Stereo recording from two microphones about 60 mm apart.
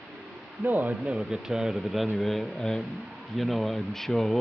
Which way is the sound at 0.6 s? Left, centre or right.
Right.